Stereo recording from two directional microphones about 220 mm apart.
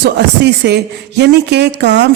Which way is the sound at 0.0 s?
50° right (ahead or behind).